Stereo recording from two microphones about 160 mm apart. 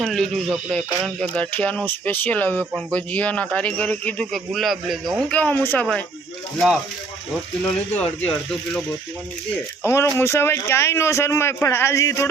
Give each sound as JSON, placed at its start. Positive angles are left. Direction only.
{"t": 0.0, "sound": "speech", "side_deg": 0}
{"t": 5.3, "sound": "speech", "side_deg": 10}
{"t": 9.8, "sound": "speech", "side_deg": 15}